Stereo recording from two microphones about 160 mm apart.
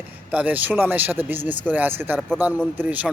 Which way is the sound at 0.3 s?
10° right (ahead or behind).